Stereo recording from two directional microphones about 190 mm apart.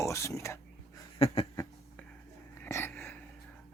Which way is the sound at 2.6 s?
15° left (ahead or behind).